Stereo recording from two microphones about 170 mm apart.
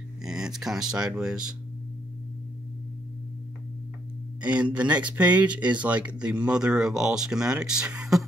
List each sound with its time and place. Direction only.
0.2 s speech: 5° right (ahead or behind)
4.4 s speech: 10° right (ahead or behind)